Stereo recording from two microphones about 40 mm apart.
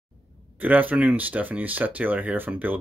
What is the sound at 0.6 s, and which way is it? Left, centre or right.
Speech, right.